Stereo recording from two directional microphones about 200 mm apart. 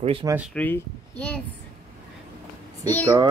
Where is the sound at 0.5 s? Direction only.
5° left (ahead or behind).